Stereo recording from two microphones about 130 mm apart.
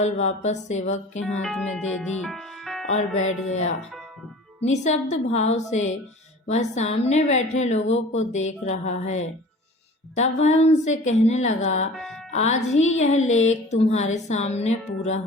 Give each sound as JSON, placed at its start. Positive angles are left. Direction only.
{"t": 0.0, "sound": "speech", "side_deg": 60}
{"t": 1.4, "sound": "speech", "side_deg": 5}
{"t": 4.6, "sound": "speech", "side_deg": 60}
{"t": 11.9, "sound": "music", "side_deg": 0}
{"t": 12.3, "sound": "speech", "side_deg": 60}